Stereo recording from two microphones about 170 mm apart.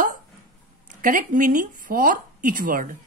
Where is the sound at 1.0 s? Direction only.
50° right (ahead or behind).